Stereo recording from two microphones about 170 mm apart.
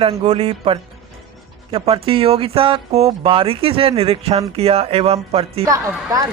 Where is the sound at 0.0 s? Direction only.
35° right (ahead or behind).